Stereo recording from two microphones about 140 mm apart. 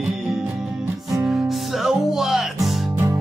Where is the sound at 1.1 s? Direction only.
Centre (ahead or behind).